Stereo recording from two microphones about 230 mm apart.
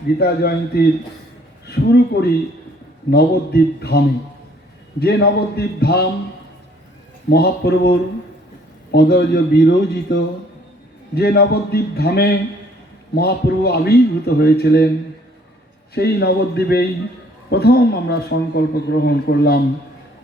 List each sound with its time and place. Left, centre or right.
0.2 s a man's voice: left
7.3 s a man's voice: left
16.0 s a man's voice: left